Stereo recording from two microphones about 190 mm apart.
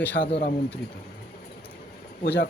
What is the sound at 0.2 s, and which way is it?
Speech, 55° left (ahead or behind).